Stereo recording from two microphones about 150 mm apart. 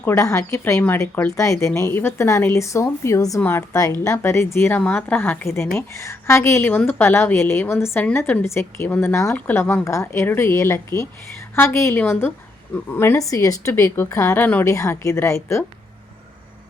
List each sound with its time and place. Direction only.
0.0 s a woman's voice: 15° left (ahead or behind)